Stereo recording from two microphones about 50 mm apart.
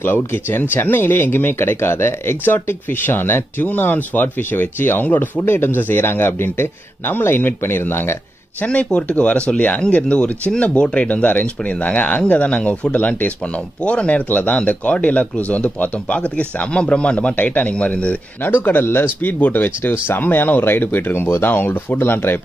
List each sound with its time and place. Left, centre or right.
0.0 s speech: left
3.6 s speech: left
5.4 s speech: left
8.6 s speech: left
11.1 s speech: left
18.4 s speech: left